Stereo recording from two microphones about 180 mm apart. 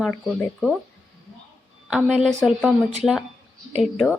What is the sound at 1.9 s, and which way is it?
Speech, 5° right (ahead or behind).